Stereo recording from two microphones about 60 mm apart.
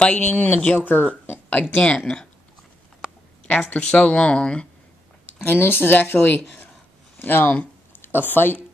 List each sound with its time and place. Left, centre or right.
0.0 s speech: left
3.7 s speech: centre
5.4 s speech: left